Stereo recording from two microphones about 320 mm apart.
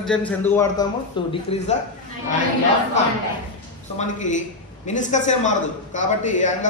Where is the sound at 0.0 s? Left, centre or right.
Centre.